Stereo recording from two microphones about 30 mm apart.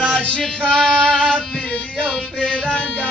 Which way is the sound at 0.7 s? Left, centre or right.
Centre.